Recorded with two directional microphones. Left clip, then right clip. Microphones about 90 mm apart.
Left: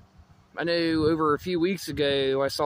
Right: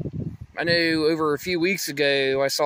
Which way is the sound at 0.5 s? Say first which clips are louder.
Right 4 dB; 10° left (ahead or behind).